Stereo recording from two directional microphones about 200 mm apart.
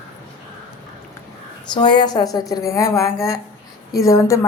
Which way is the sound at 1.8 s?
20° left (ahead or behind).